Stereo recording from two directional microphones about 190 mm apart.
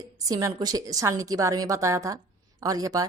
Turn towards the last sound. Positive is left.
turn(degrees=-20)  # may be behind; listen again after turning